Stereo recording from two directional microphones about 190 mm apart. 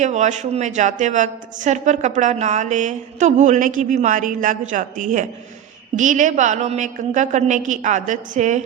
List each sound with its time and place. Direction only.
0.0 s a woman's voice: 40° right (ahead or behind)